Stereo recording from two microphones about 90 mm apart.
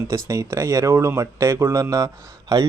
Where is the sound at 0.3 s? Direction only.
35° right (ahead or behind).